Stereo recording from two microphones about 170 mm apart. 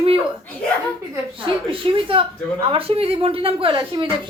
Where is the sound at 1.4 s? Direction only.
30° right (ahead or behind).